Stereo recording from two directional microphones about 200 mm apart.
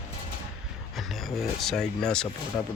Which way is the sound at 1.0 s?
Centre (ahead or behind).